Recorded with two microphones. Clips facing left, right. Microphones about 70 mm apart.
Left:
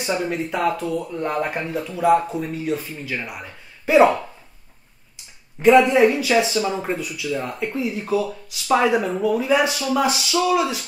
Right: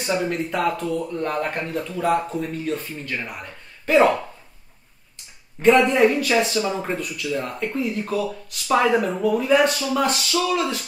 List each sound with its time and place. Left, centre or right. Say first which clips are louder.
0.0 s speech: even; centre
5.1 s speech: even; centre